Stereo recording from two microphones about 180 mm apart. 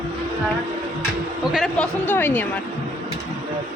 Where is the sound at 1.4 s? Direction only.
Centre (ahead or behind).